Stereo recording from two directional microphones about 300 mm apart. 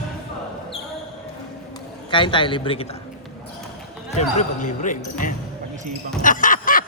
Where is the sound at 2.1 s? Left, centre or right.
Centre.